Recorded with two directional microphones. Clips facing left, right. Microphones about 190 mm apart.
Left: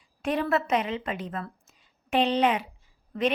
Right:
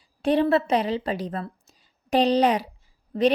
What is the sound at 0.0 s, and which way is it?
A woman's voice, 30° right (ahead or behind).